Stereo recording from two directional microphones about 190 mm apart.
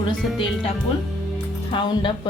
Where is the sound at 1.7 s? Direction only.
25° left (ahead or behind).